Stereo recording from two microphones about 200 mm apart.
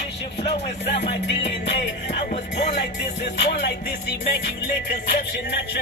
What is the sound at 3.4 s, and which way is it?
Music, 55° left (ahead or behind).